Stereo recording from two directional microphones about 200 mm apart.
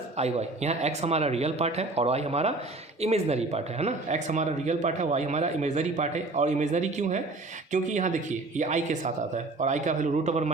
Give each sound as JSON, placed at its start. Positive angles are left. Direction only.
{"t": 0.2, "sound": "speech", "side_deg": -35}